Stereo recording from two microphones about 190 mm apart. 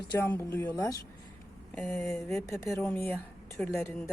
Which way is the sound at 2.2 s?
15° left (ahead or behind).